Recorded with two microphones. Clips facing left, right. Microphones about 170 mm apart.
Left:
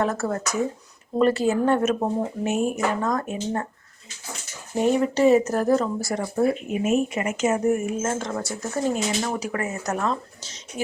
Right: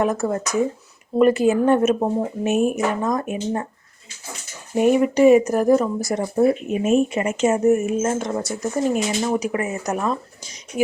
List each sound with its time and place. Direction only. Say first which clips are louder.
0.0 s speech: right 3 dB; 15° right (ahead or behind)
4.8 s speech: right 4 dB; 15° right (ahead or behind)